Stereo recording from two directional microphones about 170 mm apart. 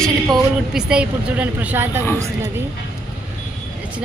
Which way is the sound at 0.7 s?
5° right (ahead or behind).